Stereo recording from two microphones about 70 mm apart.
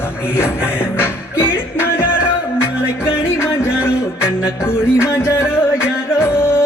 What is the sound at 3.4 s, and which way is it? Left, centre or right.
Music, left.